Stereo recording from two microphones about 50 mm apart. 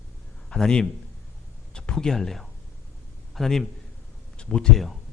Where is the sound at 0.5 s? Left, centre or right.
Left.